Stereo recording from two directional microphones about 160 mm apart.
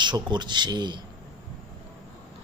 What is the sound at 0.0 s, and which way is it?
Speech, 30° right (ahead or behind).